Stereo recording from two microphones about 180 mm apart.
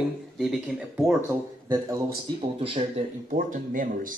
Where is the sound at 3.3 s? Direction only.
50° right (ahead or behind).